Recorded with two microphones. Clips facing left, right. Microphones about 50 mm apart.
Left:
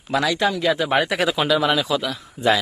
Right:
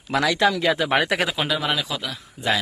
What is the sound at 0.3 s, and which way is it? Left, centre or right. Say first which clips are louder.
Speech: right 1 dB; right.